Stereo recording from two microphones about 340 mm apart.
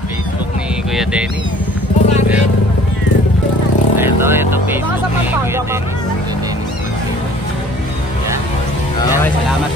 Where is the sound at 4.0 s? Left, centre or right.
Centre.